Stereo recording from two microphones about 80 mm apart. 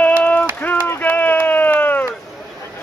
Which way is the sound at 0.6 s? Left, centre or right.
Left.